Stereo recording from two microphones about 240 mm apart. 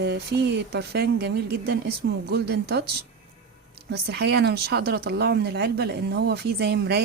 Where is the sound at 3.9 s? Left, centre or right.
Right.